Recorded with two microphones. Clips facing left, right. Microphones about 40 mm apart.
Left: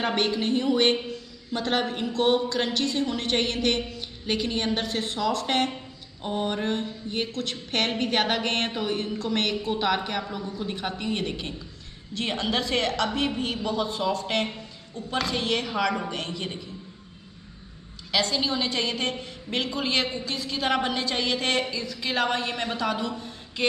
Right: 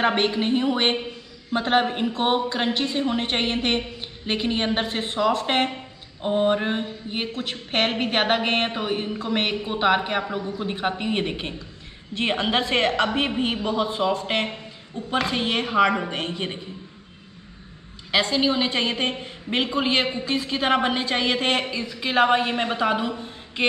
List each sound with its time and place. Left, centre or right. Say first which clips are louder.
0.0 s a woman's voice: right 4 dB; right
18.1 s a woman's voice: right 4 dB; right